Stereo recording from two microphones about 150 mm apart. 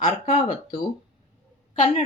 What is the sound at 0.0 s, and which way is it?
Speech, 60° left (ahead or behind).